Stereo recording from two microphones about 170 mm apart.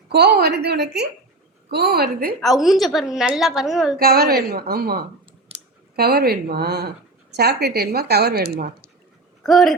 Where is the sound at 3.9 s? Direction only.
65° right (ahead or behind).